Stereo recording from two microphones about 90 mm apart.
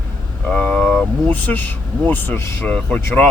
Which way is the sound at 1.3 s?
20° left (ahead or behind).